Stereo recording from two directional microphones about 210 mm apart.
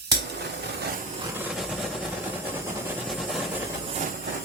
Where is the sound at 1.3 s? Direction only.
5° right (ahead or behind).